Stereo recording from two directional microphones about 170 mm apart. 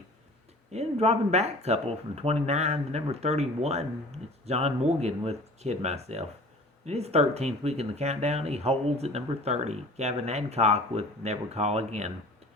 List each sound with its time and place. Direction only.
0.7 s speech: 40° right (ahead or behind)